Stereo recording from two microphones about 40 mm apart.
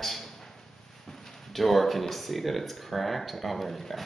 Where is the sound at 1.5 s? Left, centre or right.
Centre.